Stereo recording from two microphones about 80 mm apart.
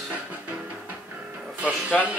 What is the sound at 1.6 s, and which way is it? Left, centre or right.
Speech, centre.